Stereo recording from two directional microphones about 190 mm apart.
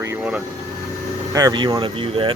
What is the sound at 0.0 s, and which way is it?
Vehicle, 10° right (ahead or behind).